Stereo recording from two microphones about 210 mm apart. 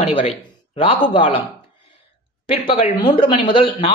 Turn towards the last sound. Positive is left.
turn(degrees=25)  # may be behind; listen again after turning